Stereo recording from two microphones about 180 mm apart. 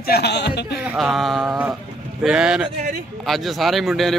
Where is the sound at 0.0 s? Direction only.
60° left (ahead or behind).